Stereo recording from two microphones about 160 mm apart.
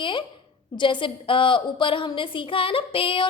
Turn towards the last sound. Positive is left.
turn(degrees=35)  # may be behind; listen again after turning